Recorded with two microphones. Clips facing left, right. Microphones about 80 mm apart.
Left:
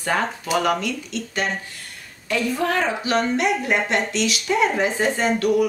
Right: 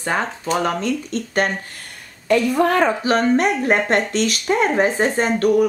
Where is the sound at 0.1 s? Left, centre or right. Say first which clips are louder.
Even; centre.